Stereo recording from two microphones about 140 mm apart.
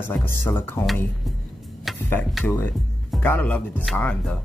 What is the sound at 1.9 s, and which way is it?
Tick-tock, centre (ahead or behind).